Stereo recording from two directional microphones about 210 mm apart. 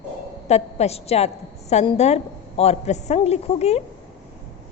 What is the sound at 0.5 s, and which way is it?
A woman's voice, 30° left (ahead or behind).